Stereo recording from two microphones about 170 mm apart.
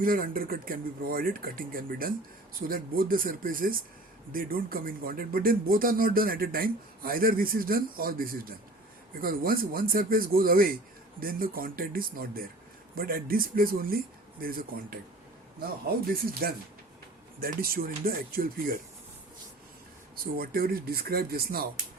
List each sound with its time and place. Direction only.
0.0 s speech: 55° right (ahead or behind)
17.4 s speech: 60° right (ahead or behind)
20.3 s speech: 60° right (ahead or behind)